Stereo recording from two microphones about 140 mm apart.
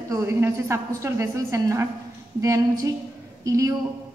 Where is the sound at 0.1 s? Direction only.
20° right (ahead or behind).